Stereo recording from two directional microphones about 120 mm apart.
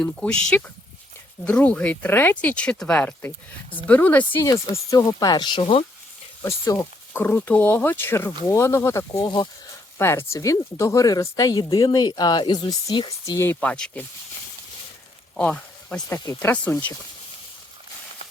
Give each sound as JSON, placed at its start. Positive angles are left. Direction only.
{"t": 0.0, "sound": "speech", "side_deg": 5}
{"t": 6.4, "sound": "speech", "side_deg": 25}
{"t": 13.2, "sound": "speech", "side_deg": 25}
{"t": 15.4, "sound": "speech", "side_deg": 10}